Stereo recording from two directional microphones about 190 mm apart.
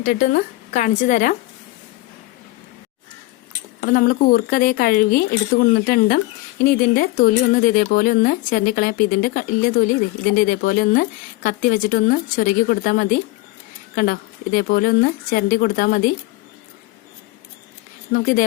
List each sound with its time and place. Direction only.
0.0 s speech: 45° left (ahead or behind)
3.8 s speech: 45° left (ahead or behind)
18.1 s speech: 50° left (ahead or behind)